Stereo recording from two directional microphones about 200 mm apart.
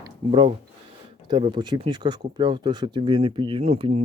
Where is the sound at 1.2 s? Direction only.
20° right (ahead or behind).